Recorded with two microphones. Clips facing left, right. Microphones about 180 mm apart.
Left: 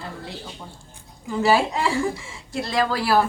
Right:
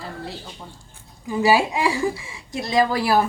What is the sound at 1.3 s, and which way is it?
Speech, 15° right (ahead or behind).